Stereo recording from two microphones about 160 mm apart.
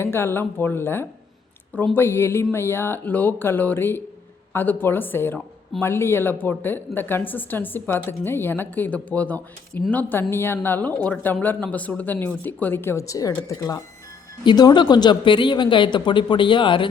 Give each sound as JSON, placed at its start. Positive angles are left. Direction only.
{"t": 0.0, "sound": "a woman's voice", "side_deg": 15}